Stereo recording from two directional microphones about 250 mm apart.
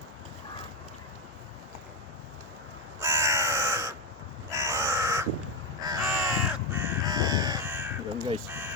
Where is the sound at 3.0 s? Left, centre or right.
Centre.